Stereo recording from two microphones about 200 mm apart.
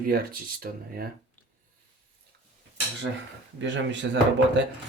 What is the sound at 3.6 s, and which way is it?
Speech, 65° right (ahead or behind).